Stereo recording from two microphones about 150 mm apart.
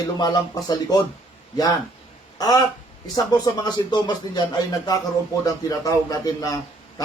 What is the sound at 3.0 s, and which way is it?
A man's voice, 25° left (ahead or behind).